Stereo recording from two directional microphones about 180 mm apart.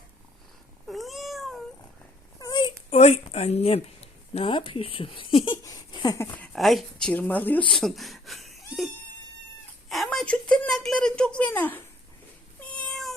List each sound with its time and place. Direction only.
0.9 s cat: centre (ahead or behind)
2.4 s a sound: 25° left (ahead or behind)
2.9 s speech: 35° left (ahead or behind)
6.3 s speech: 5° left (ahead or behind)
9.9 s a sound: centre (ahead or behind)
12.6 s cat: 5° left (ahead or behind)